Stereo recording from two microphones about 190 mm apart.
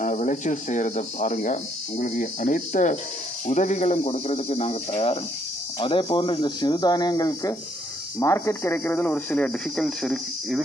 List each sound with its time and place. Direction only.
0.0 s speech: 40° left (ahead or behind); by 10.6 s centre (ahead or behind)